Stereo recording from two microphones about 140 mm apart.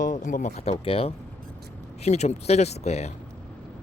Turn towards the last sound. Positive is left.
turn(degrees=50)  # may be behind; listen again after turning